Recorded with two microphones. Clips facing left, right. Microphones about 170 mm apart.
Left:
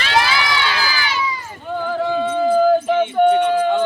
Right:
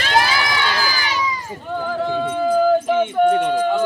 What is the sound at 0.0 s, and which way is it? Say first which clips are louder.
Crowd: even; 45° right (ahead or behind).